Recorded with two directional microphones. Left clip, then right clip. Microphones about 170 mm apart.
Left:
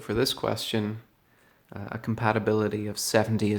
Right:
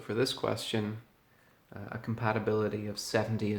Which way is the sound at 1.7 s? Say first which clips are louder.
Left 6 dB; 45° left (ahead or behind).